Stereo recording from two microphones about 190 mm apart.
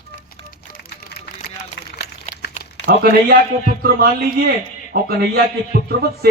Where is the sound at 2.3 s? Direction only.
35° left (ahead or behind).